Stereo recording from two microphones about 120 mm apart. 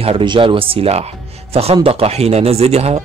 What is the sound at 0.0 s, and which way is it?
Speech, 45° right (ahead or behind).